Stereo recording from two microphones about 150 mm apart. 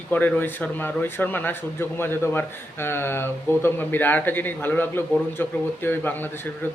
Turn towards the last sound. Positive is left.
turn(degrees=15)  # may be behind; listen again after turning